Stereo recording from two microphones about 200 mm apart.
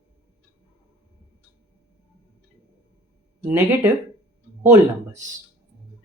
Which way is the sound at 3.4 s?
10° right (ahead or behind).